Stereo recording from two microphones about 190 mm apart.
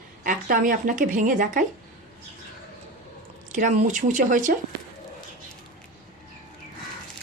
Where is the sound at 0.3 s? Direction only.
45° right (ahead or behind).